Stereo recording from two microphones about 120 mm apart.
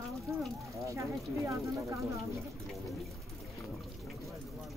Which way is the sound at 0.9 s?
25° right (ahead or behind).